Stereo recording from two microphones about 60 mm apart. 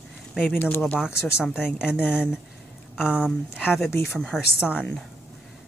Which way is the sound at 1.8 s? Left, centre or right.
Centre.